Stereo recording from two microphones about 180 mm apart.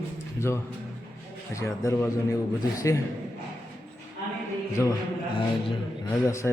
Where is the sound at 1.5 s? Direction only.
15° left (ahead or behind).